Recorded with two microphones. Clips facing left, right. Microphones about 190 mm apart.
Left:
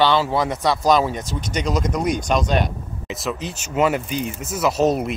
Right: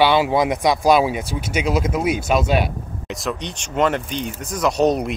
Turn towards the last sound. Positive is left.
turn(degrees=0)  # may be behind; listen again after turning